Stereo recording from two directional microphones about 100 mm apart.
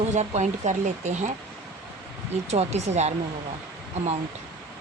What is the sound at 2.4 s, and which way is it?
Speech, 90° right.